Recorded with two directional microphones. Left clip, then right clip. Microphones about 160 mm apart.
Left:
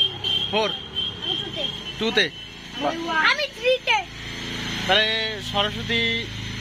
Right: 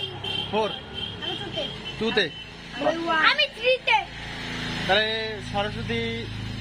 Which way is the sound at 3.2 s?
70° left (ahead or behind).